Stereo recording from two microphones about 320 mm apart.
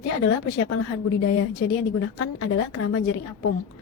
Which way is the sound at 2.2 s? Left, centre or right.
Left.